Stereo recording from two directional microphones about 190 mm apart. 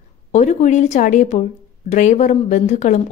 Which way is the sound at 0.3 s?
40° left (ahead or behind).